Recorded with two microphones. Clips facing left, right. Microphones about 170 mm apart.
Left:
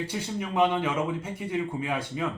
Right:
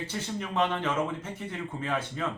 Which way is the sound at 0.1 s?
10° left (ahead or behind).